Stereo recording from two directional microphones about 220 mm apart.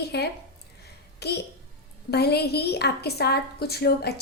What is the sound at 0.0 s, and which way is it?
A woman's voice, 50° left (ahead or behind).